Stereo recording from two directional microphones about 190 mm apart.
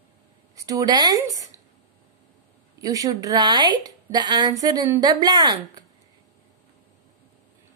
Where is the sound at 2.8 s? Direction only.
20° right (ahead or behind).